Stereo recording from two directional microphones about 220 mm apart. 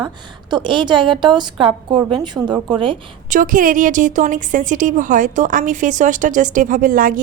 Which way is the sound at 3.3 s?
35° right (ahead or behind).